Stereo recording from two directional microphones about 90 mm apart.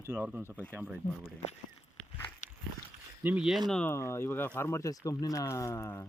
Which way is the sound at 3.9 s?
30° left (ahead or behind).